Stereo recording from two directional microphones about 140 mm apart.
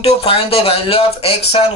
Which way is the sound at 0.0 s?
45° left (ahead or behind).